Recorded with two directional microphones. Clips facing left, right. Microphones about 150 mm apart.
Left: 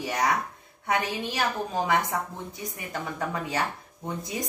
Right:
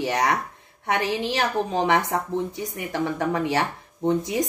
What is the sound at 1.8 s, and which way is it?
A woman's voice, 80° right.